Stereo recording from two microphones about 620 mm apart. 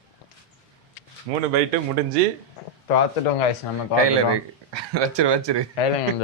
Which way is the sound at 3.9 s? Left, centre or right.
Right.